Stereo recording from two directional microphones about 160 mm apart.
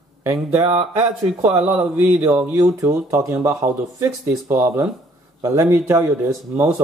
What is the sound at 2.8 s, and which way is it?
Speech, 20° right (ahead or behind).